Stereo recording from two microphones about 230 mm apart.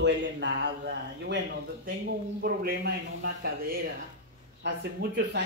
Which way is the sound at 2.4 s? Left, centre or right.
Right.